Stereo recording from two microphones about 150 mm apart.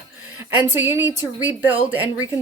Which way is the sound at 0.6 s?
15° right (ahead or behind).